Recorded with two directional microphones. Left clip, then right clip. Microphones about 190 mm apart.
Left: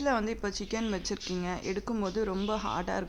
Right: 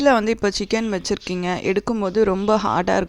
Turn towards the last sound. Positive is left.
turn(degrees=-45)  # may be behind; listen again after turning